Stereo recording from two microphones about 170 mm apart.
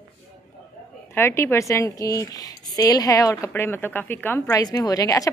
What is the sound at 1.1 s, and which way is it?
A woman's voice, 15° left (ahead or behind).